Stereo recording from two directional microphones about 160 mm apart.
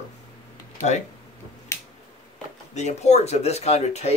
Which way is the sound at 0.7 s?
45° left (ahead or behind).